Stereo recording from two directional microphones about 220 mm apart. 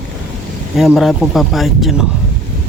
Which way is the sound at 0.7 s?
Centre (ahead or behind).